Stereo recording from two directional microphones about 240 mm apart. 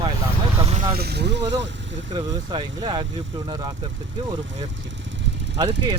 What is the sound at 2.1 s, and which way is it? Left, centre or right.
Speech, centre.